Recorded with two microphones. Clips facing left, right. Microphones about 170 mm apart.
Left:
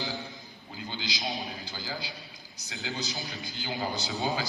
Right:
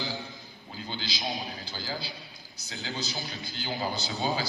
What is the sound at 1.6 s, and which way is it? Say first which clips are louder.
A man's voice: right 1 dB; 15° left (ahead or behind).